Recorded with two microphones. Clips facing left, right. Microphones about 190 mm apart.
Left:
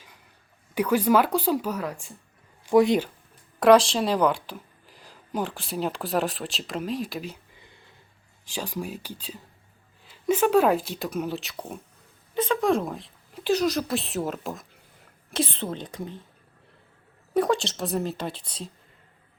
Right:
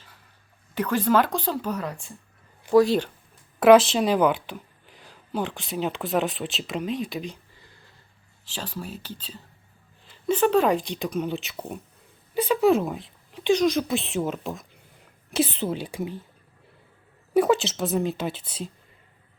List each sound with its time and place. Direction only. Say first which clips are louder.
0.7 s speech: left 1 dB; 10° left (ahead or behind)
2.7 s speech: right 1 dB; 20° left (ahead or behind)
3.6 s a woman's voice: right 2 dB; 5° right (ahead or behind)
7.5 s a sound: left 1 dB; 20° left (ahead or behind)
8.4 s a woman's voice: left 3 dB; 10° left (ahead or behind); by 16.2 s 5° right (ahead or behind)
17.3 s a woman's voice: right 3 dB; 5° right (ahead or behind)